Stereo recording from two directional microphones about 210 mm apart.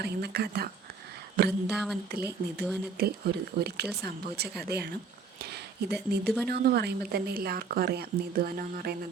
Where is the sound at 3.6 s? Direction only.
50° right (ahead or behind).